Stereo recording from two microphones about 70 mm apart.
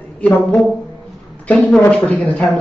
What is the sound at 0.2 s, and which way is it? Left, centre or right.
Speech, left.